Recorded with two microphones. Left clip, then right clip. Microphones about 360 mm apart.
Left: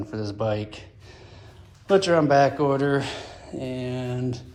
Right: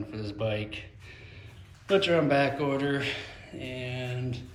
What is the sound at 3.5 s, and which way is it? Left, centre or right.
Speech, left.